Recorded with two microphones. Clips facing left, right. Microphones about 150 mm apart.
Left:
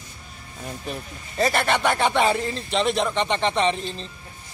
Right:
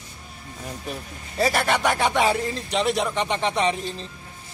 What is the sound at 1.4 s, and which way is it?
Speech, 5° right (ahead or behind).